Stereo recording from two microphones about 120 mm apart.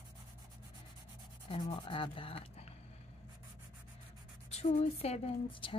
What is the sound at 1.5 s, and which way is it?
Female singing, 45° left (ahead or behind).